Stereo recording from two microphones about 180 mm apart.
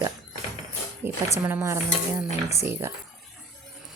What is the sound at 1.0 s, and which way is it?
A woman's voice, 10° right (ahead or behind).